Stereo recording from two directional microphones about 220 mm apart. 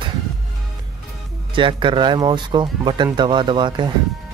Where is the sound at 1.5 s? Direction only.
20° right (ahead or behind).